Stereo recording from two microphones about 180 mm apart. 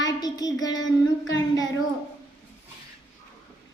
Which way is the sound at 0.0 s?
20° left (ahead or behind).